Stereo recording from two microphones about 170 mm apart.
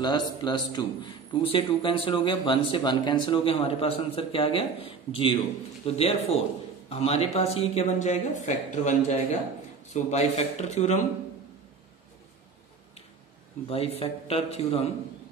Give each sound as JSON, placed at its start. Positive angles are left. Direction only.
{"t": 0.0, "sound": "a man's voice", "side_deg": 25}
{"t": 13.7, "sound": "speech", "side_deg": 35}